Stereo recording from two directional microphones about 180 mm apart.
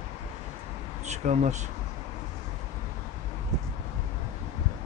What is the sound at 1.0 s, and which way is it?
Speech, 40° right (ahead or behind).